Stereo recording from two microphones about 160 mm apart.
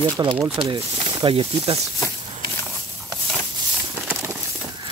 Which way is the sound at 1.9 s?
20° left (ahead or behind).